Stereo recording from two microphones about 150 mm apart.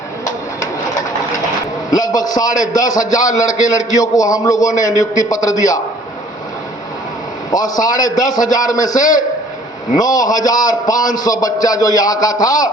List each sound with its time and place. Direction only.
0.3 s bird: 20° left (ahead or behind)
1.9 s a man's voice: 25° left (ahead or behind)
7.5 s a man's voice: 25° left (ahead or behind)
9.0 s a man's voice: 60° left (ahead or behind)
9.9 s a man's voice: 25° left (ahead or behind)